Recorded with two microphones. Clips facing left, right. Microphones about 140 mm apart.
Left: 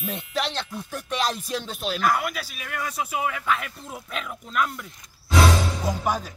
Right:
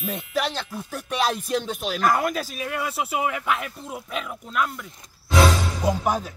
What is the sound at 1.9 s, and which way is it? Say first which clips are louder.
Speech: right 3 dB; 40° right (ahead or behind).